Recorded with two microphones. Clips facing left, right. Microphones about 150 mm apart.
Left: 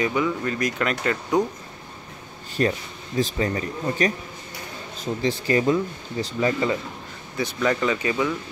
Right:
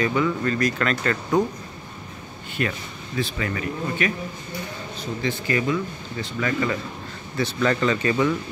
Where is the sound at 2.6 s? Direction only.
35° left (ahead or behind).